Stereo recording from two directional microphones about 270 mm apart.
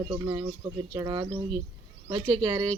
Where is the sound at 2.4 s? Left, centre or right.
Centre.